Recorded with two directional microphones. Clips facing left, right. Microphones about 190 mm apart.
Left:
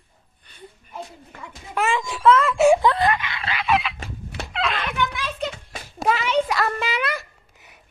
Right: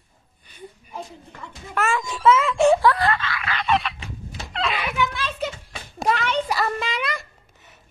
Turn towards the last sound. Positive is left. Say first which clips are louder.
# left 2 dB
turn(degrees=5)  # may be behind; listen again after turning